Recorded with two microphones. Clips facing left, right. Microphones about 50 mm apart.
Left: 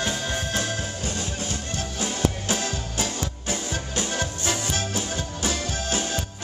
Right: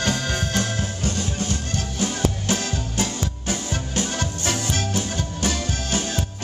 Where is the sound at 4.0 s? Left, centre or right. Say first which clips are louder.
Right 2 dB; centre.